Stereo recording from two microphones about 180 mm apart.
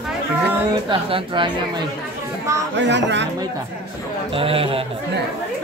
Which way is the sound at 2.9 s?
80° right.